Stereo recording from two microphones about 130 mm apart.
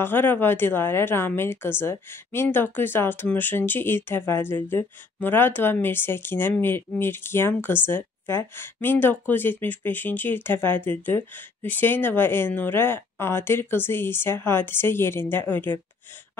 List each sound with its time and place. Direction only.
0.0 s speech: 15° left (ahead or behind)